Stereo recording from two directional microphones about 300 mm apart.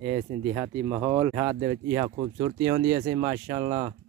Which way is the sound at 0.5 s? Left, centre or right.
Centre.